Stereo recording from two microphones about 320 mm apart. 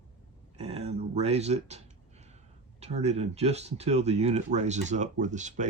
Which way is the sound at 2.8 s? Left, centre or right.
Right.